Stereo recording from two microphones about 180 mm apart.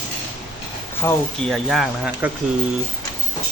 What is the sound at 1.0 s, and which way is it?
Speech, 15° left (ahead or behind).